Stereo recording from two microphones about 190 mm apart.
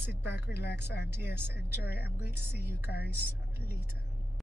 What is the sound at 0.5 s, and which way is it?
Speech, 60° left (ahead or behind).